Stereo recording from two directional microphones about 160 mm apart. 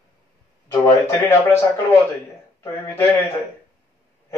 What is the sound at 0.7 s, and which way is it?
A man's voice, 20° left (ahead or behind).